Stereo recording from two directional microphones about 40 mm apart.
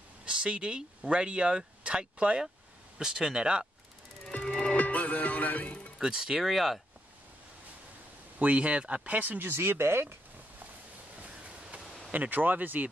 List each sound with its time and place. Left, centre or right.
0.2 s speech: right
3.0 s speech: centre
4.3 s music: left
5.9 s speech: centre
6.5 s speech: centre
8.4 s speech: right
9.5 s speech: right
11.2 s a sound: right
12.1 s speech: right